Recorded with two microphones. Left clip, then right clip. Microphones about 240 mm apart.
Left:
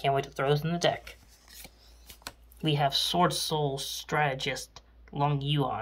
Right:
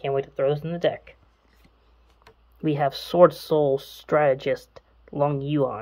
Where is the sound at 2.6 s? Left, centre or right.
Centre.